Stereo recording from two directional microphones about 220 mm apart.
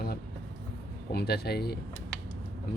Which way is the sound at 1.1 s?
45° left (ahead or behind).